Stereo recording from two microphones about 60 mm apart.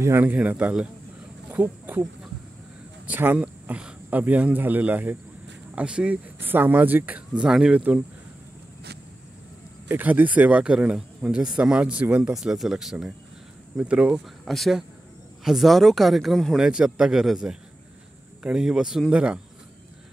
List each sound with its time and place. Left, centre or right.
0.5 s speech: right
3.1 s speech: right
3.3 s speech: right
6.4 s speech: right
7.4 s a man's voice: centre
7.7 s speech: right
9.8 s speech: right
10.6 s a man's voice: centre
12.2 s a man's voice: centre
13.7 s speech: right
14.4 s speech: centre
16.5 s a man's voice: centre